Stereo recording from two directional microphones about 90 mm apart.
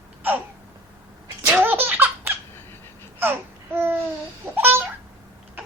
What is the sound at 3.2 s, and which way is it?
Babbling, 25° right (ahead or behind).